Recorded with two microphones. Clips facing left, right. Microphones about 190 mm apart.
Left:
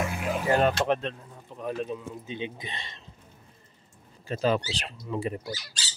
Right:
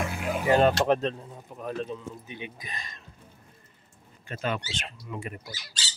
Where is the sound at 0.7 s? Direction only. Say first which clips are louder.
Right 2 dB; 40° right (ahead or behind).